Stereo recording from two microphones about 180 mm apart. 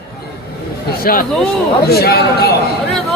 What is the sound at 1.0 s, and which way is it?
A woman's voice, 55° left (ahead or behind).